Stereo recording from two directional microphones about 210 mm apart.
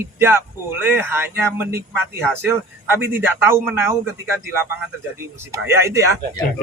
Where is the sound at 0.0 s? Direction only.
10° right (ahead or behind).